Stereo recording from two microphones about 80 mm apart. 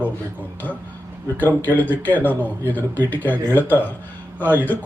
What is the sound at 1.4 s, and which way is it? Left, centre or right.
Speech, left.